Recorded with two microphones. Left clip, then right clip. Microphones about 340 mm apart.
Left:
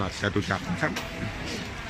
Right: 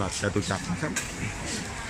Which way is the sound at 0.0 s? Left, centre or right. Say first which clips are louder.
Even; centre.